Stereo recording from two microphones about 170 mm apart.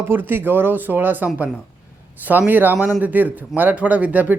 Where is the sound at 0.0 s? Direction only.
10° right (ahead or behind).